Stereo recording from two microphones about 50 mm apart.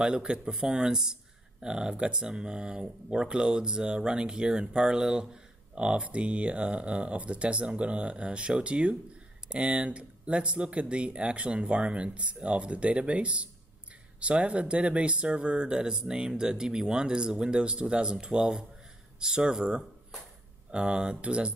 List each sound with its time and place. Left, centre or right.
0.0 s speech: centre